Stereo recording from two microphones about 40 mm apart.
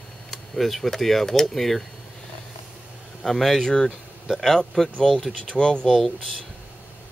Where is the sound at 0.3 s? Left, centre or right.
Centre.